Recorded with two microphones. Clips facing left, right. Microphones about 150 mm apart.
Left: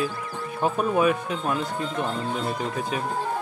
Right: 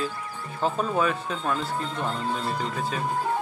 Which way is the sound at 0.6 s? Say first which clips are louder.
Left 3 dB; 15° left (ahead or behind).